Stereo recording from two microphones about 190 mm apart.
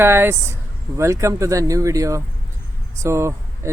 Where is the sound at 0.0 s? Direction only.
10° right (ahead or behind).